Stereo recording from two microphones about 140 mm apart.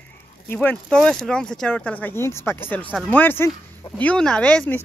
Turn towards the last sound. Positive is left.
turn(degrees=10)  # may be behind; listen again after turning